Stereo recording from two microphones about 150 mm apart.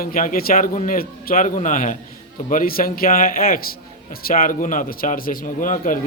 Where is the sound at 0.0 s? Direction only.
70° left (ahead or behind).